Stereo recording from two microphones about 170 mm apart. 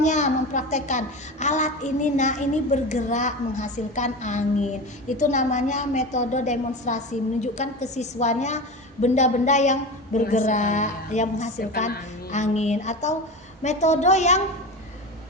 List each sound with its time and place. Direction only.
0.0 s a child's voice: 45° left (ahead or behind)